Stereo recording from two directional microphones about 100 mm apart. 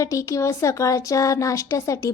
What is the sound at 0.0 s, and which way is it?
Speech, 30° left (ahead or behind).